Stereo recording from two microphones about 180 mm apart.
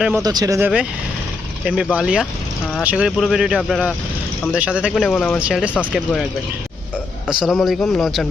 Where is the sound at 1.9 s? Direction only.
5° right (ahead or behind).